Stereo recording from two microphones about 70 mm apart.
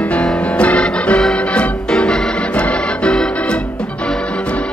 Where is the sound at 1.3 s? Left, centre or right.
Centre.